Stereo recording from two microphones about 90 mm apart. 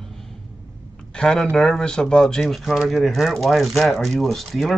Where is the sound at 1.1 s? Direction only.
5° left (ahead or behind).